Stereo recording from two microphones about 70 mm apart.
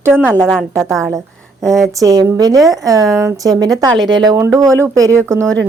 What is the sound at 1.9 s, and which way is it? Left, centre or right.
Speech, right.